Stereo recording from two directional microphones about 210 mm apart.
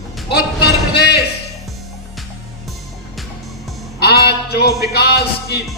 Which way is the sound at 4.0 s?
50° left (ahead or behind).